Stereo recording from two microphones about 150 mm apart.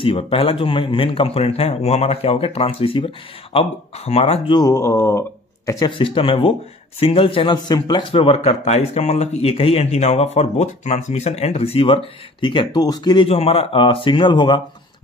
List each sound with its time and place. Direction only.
0.0 s a man's voice: 35° left (ahead or behind)
4.6 s speech: 20° left (ahead or behind)
5.7 s a man's voice: 30° left (ahead or behind)